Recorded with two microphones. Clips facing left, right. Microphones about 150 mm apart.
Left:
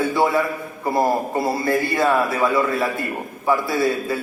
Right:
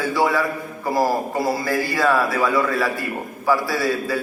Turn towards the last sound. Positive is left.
turn(degrees=25)  # may be behind; listen again after turning